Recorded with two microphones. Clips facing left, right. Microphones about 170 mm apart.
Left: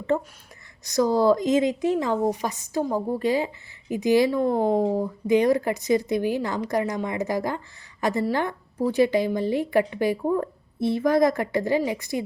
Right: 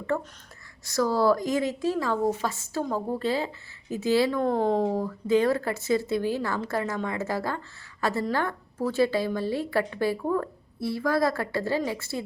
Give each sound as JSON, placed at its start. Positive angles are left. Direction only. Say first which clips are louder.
{"t": 0.1, "sound": "speech", "louder": "left 4 dB", "side_deg": 20}